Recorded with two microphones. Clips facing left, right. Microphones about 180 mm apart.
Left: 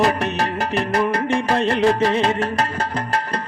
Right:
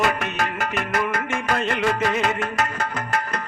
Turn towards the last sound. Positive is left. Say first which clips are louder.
# left 3 dB
turn(degrees=30)  # may be behind; listen again after turning